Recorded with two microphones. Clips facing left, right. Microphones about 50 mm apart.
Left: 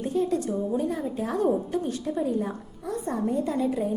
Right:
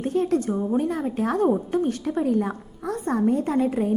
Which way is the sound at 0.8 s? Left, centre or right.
Right.